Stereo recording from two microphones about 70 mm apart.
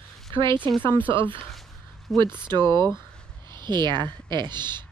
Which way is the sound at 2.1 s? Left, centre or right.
Right.